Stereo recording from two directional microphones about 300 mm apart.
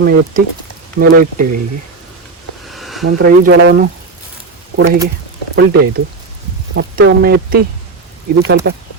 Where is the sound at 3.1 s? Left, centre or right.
Right.